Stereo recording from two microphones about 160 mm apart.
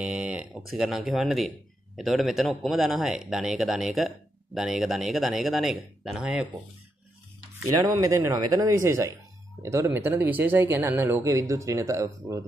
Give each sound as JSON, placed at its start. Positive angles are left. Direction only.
{"t": 0.0, "sound": "speech", "side_deg": -5}
{"t": 8.0, "sound": "speech", "side_deg": -20}